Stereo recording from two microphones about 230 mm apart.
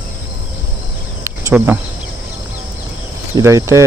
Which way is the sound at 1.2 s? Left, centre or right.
Centre.